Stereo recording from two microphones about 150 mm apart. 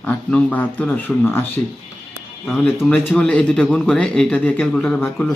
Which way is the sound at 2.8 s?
10° left (ahead or behind).